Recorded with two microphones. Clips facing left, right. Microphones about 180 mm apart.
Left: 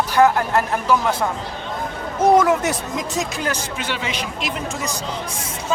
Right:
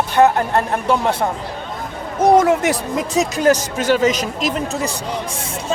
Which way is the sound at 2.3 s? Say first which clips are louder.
Right 3 dB; 30° right (ahead or behind).